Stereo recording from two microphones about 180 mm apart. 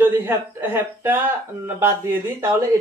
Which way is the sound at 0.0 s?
10° right (ahead or behind).